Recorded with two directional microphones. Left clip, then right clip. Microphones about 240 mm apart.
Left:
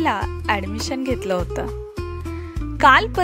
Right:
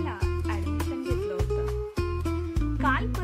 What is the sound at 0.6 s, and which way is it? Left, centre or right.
Music, centre.